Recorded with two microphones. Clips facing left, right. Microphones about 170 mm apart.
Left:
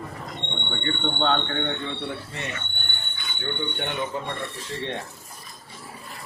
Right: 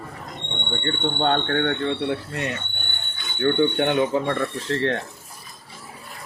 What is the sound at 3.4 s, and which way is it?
Speech, 90° right.